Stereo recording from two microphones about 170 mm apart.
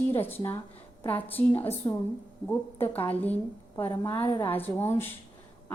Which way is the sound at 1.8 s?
25° left (ahead or behind).